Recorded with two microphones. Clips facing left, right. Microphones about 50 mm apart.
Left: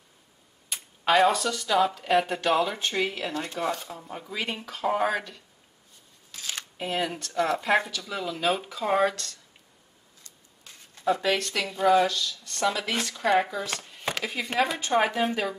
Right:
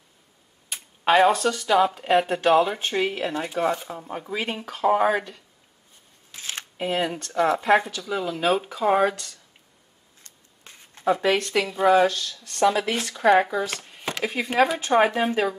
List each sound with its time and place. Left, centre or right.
0.7 s speech: centre
4.7 s speech: centre
6.3 s shuffling cards: right
6.9 s speech: centre
10.2 s a sound: right
11.1 s speech: right
12.1 s speech: right
12.6 s speech: centre